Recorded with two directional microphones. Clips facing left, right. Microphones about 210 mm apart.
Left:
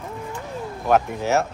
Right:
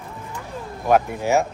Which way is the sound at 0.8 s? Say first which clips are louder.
Right 1 dB; 10° right (ahead or behind).